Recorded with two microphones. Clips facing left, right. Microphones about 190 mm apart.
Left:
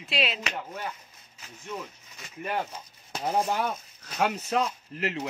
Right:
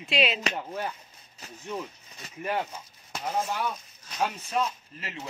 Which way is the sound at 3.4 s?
50° left (ahead or behind).